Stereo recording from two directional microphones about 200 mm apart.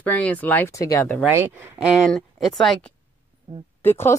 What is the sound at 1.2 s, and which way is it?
Speech, 10° right (ahead or behind).